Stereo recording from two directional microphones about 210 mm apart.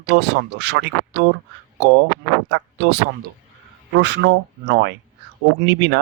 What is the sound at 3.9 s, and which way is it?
Speech, 55° right (ahead or behind).